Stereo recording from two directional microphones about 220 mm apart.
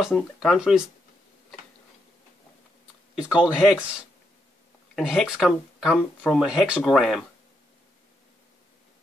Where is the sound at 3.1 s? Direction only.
Centre (ahead or behind).